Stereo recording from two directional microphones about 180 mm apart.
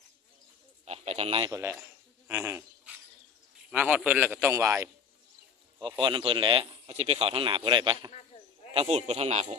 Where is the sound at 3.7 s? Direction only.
10° right (ahead or behind).